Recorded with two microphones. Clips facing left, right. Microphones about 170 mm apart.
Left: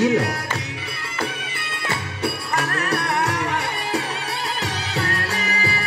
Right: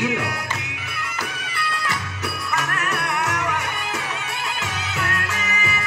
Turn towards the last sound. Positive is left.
turn(degrees=35)  # may be behind; listen again after turning